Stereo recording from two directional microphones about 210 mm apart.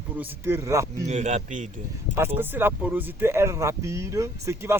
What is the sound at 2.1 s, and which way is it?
Speech, 10° right (ahead or behind).